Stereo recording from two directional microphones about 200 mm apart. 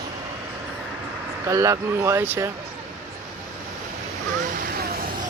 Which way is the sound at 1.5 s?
15° right (ahead or behind).